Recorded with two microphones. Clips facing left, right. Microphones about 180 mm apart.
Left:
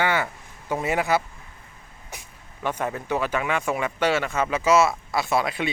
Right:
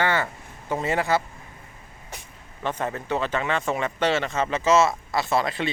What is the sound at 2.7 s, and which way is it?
Speech, 10° left (ahead or behind).